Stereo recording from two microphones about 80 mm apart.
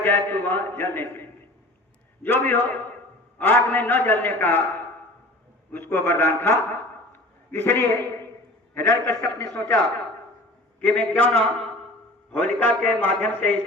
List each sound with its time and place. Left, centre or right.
0.0 s a man's voice: left
5.7 s a man's voice: left
7.1 s a sound: left
8.7 s a man's voice: left